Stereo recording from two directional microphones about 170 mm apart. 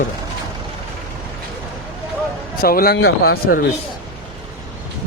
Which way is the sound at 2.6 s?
60° left (ahead or behind).